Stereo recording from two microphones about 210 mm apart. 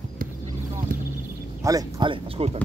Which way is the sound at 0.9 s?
40° right (ahead or behind).